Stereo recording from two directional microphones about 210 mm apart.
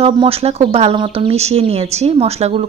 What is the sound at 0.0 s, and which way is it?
Speech, 30° right (ahead or behind).